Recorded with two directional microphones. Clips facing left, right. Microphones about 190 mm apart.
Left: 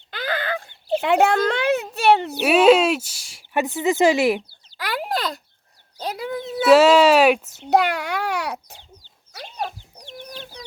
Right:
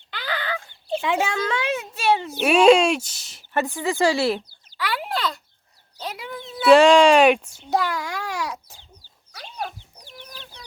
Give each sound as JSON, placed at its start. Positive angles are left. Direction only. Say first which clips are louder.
{"t": 0.1, "sound": "a sound", "louder": "left 3 dB", "side_deg": 45}
{"t": 1.0, "sound": "a child's voice", "louder": "left 7 dB", "side_deg": 65}
{"t": 2.5, "sound": "speech", "louder": "even", "side_deg": 5}
{"t": 4.8, "sound": "a sound", "louder": "left 1 dB", "side_deg": 40}
{"t": 6.0, "sound": "bird", "louder": "left 6 dB", "side_deg": 40}
{"t": 6.7, "sound": "speech", "louder": "even", "side_deg": 5}
{"t": 7.7, "sound": "babbling", "louder": "left 5 dB", "side_deg": 65}